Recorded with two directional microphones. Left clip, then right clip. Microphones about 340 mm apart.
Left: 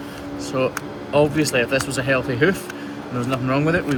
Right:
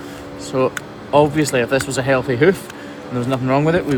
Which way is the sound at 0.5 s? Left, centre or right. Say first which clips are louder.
Right 4 dB; right.